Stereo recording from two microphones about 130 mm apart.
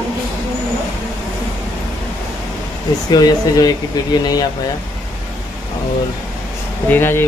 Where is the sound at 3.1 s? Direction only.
30° left (ahead or behind).